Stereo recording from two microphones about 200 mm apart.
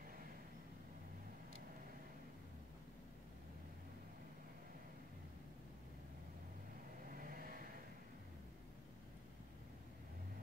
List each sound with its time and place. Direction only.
7.2 s vehicle: 45° right (ahead or behind)